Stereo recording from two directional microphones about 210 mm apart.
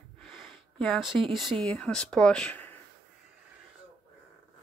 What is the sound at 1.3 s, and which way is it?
Speech, centre (ahead or behind).